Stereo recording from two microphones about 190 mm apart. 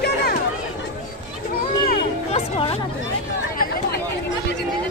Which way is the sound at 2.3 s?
25° left (ahead or behind).